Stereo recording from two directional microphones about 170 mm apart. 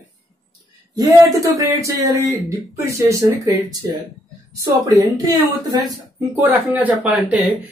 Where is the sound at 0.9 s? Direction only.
20° right (ahead or behind).